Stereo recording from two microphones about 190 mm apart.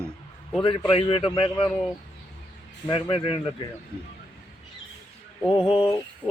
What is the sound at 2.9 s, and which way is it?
Speech, 25° left (ahead or behind).